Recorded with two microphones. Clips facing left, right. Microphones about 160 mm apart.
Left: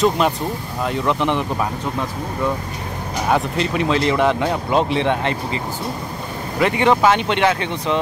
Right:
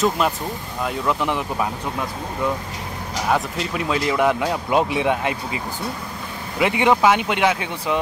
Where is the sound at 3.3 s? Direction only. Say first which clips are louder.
Left 3 dB; 5° right (ahead or behind).